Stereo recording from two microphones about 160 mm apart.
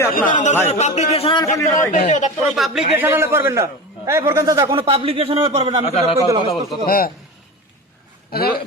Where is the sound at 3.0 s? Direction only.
15° right (ahead or behind).